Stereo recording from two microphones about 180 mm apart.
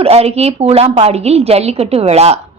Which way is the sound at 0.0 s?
35° right (ahead or behind).